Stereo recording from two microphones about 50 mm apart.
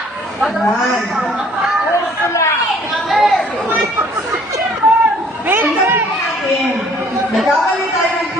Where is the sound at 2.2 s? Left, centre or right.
Left.